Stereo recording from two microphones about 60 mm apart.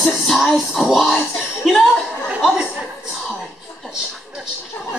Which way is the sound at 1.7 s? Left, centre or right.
Centre.